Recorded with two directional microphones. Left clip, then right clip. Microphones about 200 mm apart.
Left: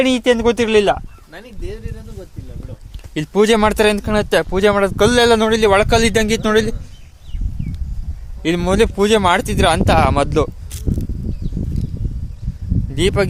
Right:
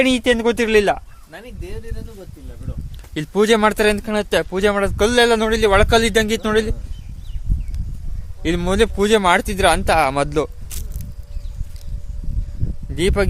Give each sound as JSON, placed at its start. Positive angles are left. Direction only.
{"t": 0.0, "sound": "speech", "side_deg": 0}
{"t": 1.3, "sound": "speech", "side_deg": -35}
{"t": 3.2, "sound": "speech", "side_deg": 10}
{"t": 8.4, "sound": "speech", "side_deg": 10}
{"t": 10.7, "sound": "walk", "side_deg": -5}
{"t": 13.0, "sound": "speech", "side_deg": 0}